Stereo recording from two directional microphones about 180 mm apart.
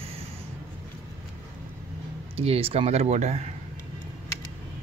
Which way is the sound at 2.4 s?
30° right (ahead or behind).